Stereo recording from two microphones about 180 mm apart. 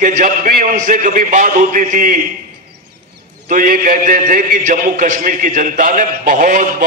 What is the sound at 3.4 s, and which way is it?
A man's voice, 50° right (ahead or behind).